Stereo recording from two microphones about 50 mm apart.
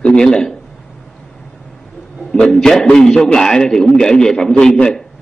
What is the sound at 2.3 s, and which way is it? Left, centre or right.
A man's voice, centre.